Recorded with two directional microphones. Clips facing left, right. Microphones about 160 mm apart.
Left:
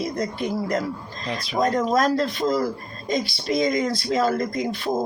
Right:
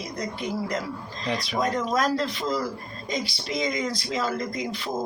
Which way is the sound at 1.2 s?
Centre (ahead or behind).